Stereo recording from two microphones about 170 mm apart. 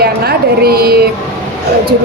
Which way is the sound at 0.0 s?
65° right (ahead or behind).